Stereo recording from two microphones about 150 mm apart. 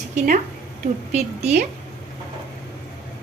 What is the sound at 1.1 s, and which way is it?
Speech, 50° right (ahead or behind).